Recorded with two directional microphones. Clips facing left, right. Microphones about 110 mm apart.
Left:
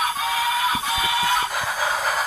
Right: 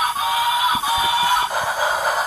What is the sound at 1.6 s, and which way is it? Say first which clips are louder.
Music: right 4 dB; 20° right (ahead or behind).